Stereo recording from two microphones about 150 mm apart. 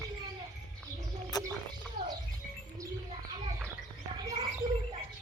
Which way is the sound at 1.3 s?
25° left (ahead or behind).